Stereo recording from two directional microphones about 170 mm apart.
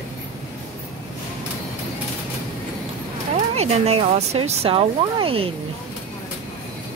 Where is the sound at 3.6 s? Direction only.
40° right (ahead or behind).